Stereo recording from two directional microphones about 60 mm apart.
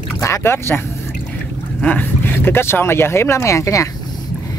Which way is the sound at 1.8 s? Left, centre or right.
Left.